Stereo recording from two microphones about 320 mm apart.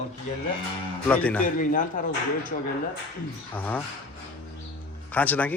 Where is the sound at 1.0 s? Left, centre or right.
Centre.